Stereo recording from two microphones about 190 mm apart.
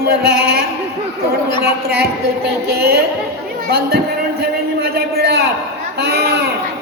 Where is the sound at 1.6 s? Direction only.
60° right (ahead or behind).